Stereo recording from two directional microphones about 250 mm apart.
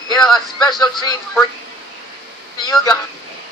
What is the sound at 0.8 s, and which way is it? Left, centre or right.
Speech, centre.